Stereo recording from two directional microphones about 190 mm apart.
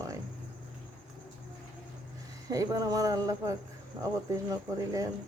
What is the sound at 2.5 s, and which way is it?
Female singing, 20° right (ahead or behind).